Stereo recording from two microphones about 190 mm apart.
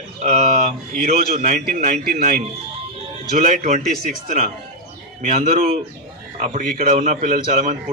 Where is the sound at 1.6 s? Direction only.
40° right (ahead or behind).